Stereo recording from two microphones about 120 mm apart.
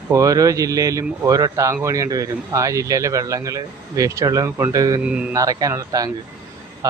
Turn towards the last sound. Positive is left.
turn(degrees=-30)  # may be behind; listen again after turning